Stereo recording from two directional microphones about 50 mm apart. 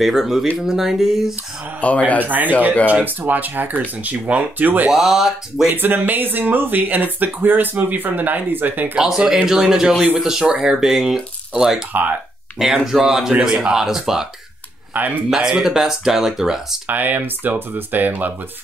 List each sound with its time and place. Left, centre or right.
0.0 s speech: centre
1.8 s speech: left
2.1 s speech: right
4.9 s speech: centre
5.7 s speech: right
8.9 s speech: centre
15.0 s speech: right
15.2 s speech: centre
16.9 s speech: right